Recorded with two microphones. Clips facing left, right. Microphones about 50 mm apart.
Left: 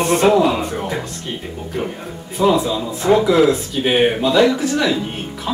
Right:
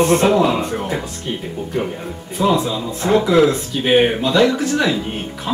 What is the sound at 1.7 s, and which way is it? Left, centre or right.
Speech, centre.